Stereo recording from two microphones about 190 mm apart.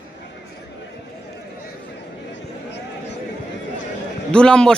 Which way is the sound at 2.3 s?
65° left (ahead or behind).